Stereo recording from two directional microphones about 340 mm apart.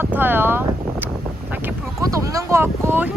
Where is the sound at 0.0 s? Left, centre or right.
Centre.